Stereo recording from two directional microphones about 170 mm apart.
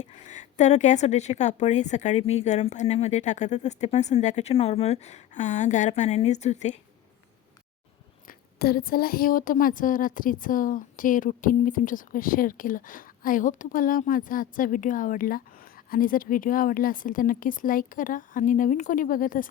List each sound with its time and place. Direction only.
0.0 s a woman's voice: 45° left (ahead or behind)
8.3 s a woman's voice: 60° left (ahead or behind)